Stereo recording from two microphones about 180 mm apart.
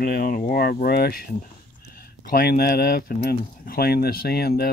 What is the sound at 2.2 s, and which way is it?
Speech, 55° left (ahead or behind).